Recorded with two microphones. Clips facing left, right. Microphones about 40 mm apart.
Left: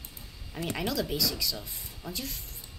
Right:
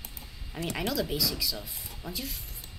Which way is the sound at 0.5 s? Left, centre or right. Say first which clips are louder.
Even; centre.